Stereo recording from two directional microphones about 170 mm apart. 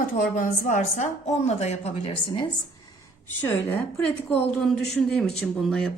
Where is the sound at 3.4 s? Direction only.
10° left (ahead or behind).